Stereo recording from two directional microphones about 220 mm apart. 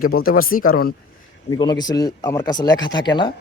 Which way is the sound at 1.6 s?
20° left (ahead or behind).